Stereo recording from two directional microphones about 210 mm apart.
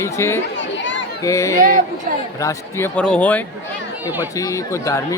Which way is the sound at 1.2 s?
15° left (ahead or behind).